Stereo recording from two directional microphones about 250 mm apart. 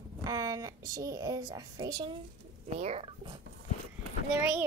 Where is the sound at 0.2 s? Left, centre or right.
Centre.